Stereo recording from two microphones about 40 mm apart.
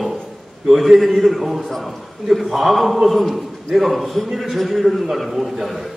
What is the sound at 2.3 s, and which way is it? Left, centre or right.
A man's voice, centre.